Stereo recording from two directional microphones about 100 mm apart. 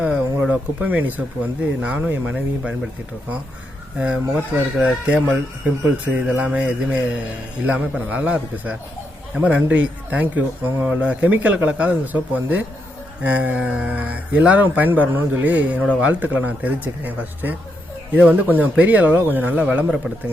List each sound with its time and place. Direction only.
0.0 s speech: 15° right (ahead or behind)
3.9 s speech: 10° right (ahead or behind)